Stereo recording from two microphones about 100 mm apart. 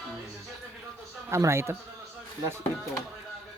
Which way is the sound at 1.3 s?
30° right (ahead or behind).